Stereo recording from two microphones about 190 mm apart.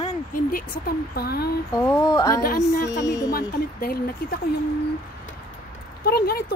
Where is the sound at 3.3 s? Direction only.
55° left (ahead or behind).